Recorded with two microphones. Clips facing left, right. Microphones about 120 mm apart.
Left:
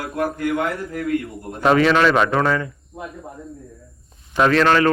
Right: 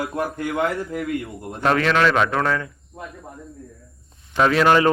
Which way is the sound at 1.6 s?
5° left (ahead or behind).